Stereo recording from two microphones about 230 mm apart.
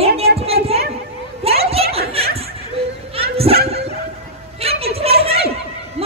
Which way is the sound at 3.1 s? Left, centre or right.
Right.